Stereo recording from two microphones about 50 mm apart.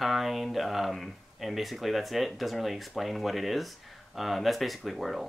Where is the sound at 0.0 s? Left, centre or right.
Centre.